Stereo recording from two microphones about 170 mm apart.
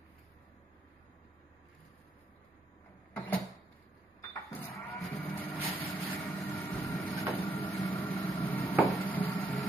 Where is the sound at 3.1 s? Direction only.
10° left (ahead or behind).